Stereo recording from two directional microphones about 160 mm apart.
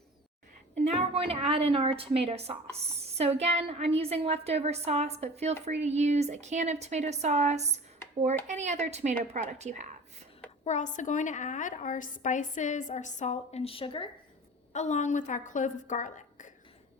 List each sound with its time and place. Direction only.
0.9 s a woman's voice: 35° right (ahead or behind)
10.6 s a woman's voice: 50° left (ahead or behind)
14.7 s a woman's voice: 45° left (ahead or behind)